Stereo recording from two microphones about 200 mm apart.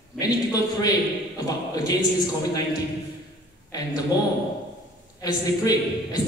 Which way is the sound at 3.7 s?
20° left (ahead or behind).